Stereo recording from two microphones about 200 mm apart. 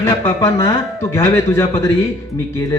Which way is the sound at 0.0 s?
15° left (ahead or behind).